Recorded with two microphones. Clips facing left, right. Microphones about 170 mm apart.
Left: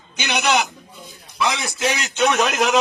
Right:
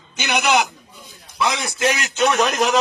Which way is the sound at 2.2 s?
Centre (ahead or behind).